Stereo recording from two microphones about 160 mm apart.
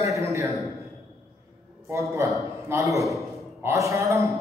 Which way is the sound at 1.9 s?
20° right (ahead or behind).